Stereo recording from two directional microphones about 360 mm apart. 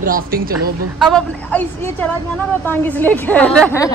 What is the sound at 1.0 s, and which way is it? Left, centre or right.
A woman's voice, centre.